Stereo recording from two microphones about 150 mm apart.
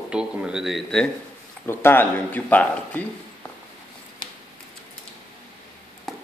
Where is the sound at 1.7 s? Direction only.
15° left (ahead or behind).